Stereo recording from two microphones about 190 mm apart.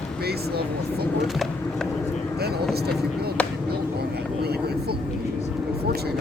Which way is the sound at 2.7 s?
55° right (ahead or behind).